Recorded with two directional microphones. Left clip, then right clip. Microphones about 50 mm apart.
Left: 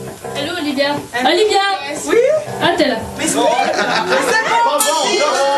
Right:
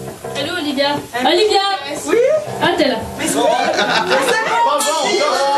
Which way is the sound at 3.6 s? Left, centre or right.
Right.